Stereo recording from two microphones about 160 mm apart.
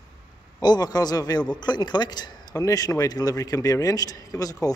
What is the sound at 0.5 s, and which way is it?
A man's voice, 25° left (ahead or behind).